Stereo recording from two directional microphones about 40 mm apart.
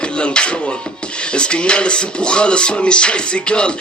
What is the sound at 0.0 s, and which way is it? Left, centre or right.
Music, left.